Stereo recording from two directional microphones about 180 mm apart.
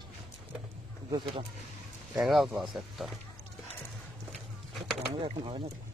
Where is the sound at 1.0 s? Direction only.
30° right (ahead or behind).